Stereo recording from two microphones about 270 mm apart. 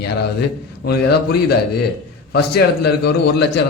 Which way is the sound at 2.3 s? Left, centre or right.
Left.